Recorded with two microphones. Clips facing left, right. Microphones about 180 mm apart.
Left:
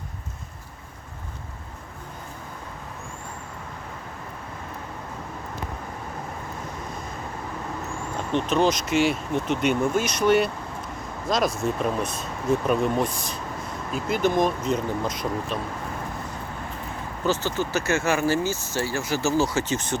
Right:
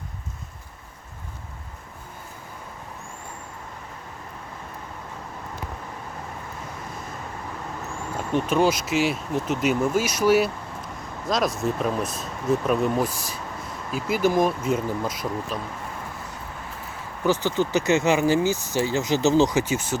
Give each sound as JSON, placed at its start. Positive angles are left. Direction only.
{"t": 8.3, "sound": "speech", "side_deg": -10}
{"t": 17.2, "sound": "speech", "side_deg": -15}